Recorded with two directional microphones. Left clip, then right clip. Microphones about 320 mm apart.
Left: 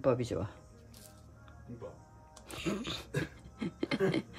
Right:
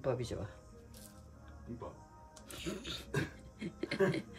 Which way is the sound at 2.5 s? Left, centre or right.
Centre.